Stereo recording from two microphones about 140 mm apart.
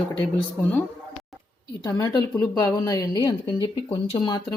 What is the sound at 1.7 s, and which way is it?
A woman's voice, 30° left (ahead or behind).